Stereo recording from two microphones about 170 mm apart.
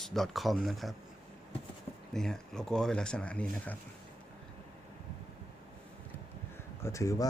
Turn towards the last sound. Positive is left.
turn(degrees=20)  # may be behind; listen again after turning